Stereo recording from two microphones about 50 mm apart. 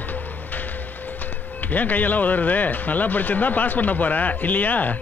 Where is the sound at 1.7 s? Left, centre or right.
Left.